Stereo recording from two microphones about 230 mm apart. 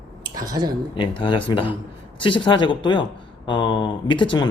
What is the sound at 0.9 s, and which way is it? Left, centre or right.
Speech, left.